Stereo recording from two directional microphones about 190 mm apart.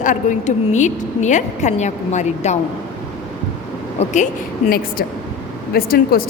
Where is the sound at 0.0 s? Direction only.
40° left (ahead or behind).